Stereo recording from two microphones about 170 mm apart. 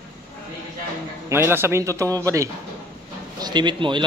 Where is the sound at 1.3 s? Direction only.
15° right (ahead or behind).